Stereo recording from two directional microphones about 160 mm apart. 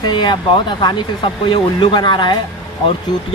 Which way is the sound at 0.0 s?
30° left (ahead or behind).